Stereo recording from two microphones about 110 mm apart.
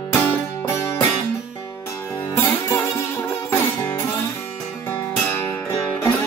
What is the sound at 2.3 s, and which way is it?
Music, 20° left (ahead or behind).